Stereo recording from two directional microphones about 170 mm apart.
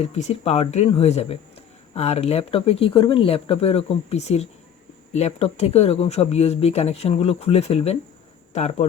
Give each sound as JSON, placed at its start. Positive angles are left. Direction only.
{"t": 0.0, "sound": "speech", "side_deg": 40}